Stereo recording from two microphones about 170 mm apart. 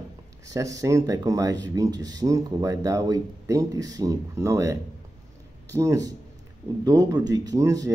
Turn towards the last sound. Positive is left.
turn(degrees=-20)  # may be behind; listen again after turning